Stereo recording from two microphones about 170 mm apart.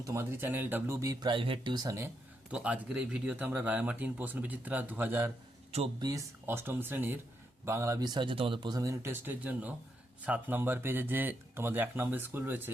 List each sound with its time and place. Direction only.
0.0 s speech: 15° right (ahead or behind)
2.5 s speech: 5° right (ahead or behind)